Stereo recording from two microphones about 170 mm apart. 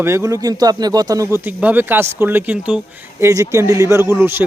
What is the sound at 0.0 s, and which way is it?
A man's voice, 15° right (ahead or behind).